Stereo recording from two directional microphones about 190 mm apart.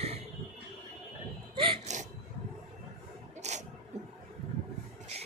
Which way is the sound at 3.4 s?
35° right (ahead or behind).